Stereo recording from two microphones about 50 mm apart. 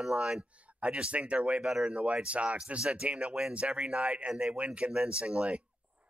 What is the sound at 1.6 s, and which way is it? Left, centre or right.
Speech, centre.